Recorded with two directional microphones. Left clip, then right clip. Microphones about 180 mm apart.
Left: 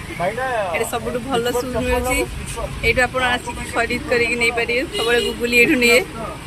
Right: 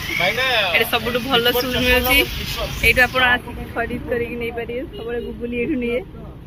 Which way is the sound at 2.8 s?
10° left (ahead or behind).